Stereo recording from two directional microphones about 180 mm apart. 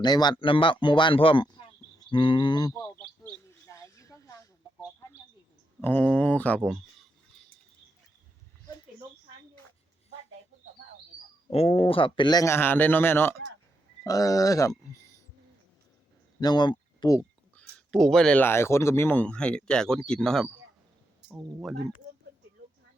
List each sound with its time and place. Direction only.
0.0 s speech: 25° left (ahead or behind)
3.7 s a sound: 15° left (ahead or behind)
5.8 s speech: 10° left (ahead or behind)
11.5 s speech: 30° left (ahead or behind)
16.4 s speech: 25° left (ahead or behind)
17.5 s speech: 5° left (ahead or behind)